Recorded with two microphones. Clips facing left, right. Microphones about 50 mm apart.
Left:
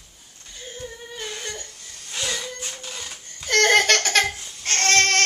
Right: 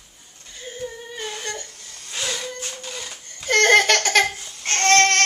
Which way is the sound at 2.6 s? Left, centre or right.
Right.